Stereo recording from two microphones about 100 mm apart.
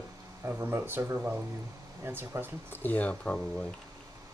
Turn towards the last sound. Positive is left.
turn(degrees=10)  # may be behind; listen again after turning